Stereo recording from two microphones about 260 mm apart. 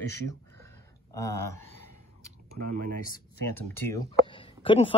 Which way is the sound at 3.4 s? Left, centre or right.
Centre.